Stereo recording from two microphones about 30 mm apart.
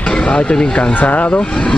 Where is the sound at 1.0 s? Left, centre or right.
Left.